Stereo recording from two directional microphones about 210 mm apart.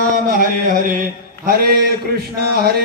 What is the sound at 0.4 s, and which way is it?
Mantra, 40° right (ahead or behind).